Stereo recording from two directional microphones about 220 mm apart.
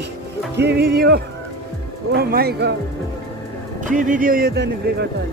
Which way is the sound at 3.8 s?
35° right (ahead or behind).